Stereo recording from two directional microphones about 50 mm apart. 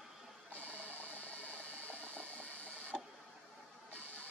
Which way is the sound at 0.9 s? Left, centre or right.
Right.